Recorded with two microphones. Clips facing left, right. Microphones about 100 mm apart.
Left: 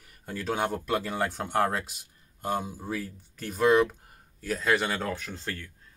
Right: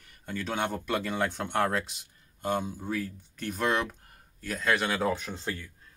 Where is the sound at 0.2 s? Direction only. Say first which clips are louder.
Left 2 dB; 5° left (ahead or behind).